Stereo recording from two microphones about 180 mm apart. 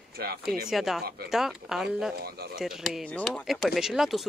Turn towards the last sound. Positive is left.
turn(degrees=0)  # may be behind; listen again after turning